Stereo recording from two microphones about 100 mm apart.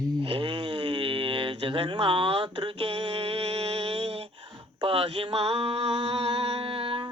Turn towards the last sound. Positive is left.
turn(degrees=-65)  # may be behind; listen again after turning